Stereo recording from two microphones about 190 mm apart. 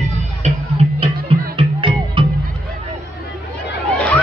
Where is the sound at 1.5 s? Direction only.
25° right (ahead or behind).